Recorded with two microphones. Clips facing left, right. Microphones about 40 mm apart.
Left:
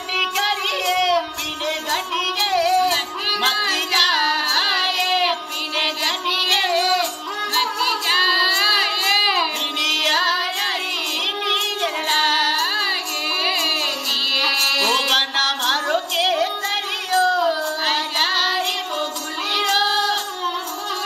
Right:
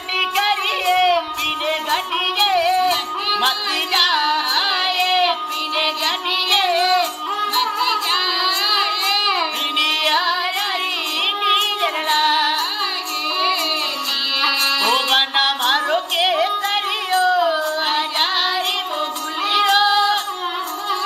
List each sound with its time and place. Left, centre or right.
0.2 s child singing: centre
1.7 s music: right
4.7 s child singing: centre
7.6 s music: centre
8.2 s child singing: centre
8.5 s crowd: centre
9.8 s music: right
11.4 s child singing: right
12.3 s music: right
14.4 s music: centre
17.1 s child singing: centre
19.5 s music: right